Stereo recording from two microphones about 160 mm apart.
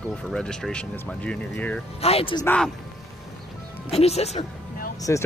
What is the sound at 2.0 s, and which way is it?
Speech, 40° left (ahead or behind).